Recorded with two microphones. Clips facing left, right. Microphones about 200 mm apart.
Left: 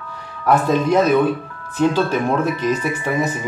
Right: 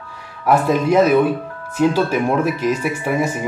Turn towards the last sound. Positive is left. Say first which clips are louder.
# right 1 dB
turn(degrees=-10)  # may be behind; listen again after turning